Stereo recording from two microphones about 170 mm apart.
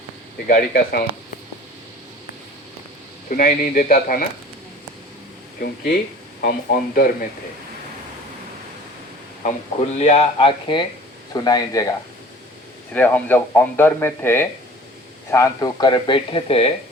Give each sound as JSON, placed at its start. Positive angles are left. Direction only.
{"t": 0.4, "sound": "speech", "side_deg": 60}
{"t": 3.2, "sound": "speech", "side_deg": 55}
{"t": 5.5, "sound": "speech", "side_deg": 70}
{"t": 6.4, "sound": "speech", "side_deg": 60}
{"t": 10.0, "sound": "speech", "side_deg": 40}
{"t": 12.9, "sound": "speech", "side_deg": 10}